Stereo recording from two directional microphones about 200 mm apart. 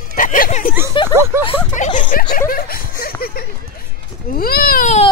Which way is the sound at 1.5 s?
40° left (ahead or behind).